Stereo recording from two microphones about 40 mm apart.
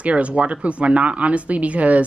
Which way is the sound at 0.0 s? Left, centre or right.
Right.